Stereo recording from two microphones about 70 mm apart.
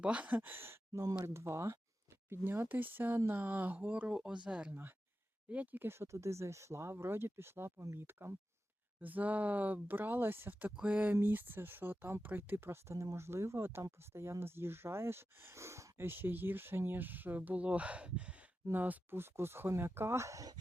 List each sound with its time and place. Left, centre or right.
0.0 s speech: centre; by 1.8 s right
2.3 s speech: right; by 4.7 s centre
4.7 s speech: right
10.7 s speech: centre; by 20.5 s right